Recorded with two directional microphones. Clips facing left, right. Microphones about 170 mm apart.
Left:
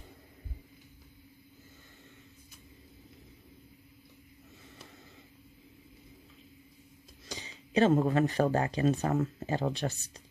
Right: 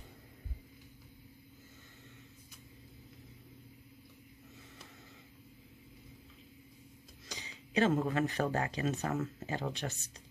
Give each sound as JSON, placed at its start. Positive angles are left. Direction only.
{"t": 7.2, "sound": "speech", "side_deg": 30}